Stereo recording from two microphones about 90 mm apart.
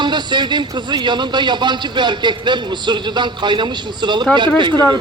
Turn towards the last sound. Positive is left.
turn(degrees=-55)  # may be behind; listen again after turning